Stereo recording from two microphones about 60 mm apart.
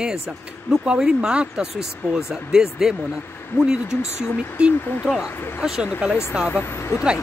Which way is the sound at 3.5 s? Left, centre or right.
Left.